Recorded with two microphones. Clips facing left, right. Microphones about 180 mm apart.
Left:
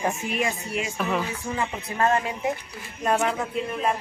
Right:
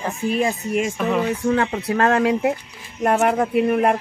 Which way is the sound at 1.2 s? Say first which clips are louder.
Right 9 dB; 70° right (ahead or behind).